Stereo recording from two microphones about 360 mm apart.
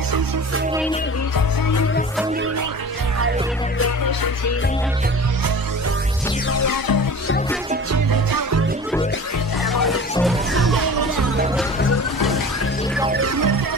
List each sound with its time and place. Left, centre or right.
6.5 s music: left
8.1 s music: right
9.8 s music: centre
10.7 s music: right